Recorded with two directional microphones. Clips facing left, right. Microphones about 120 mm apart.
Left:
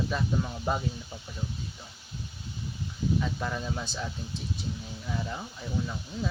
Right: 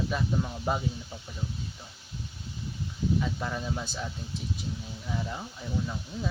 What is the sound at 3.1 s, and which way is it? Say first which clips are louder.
Speech: even; 5° right (ahead or behind).